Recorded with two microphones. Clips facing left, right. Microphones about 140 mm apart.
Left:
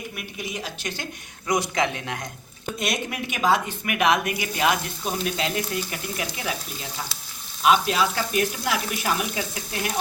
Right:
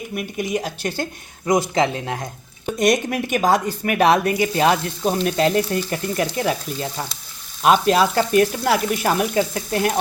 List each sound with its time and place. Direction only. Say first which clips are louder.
0.2 s speech: right 12 dB; 45° right (ahead or behind); by 2.2 s 30° right (ahead or behind)
2.7 s speech: right 10 dB; 45° right (ahead or behind)
5.2 s speech: right 9 dB; 45° right (ahead or behind)